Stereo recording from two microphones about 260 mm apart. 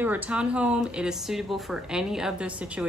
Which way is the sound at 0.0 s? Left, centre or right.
Centre.